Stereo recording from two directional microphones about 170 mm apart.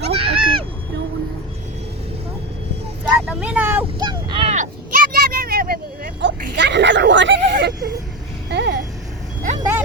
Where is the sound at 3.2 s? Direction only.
5° right (ahead or behind).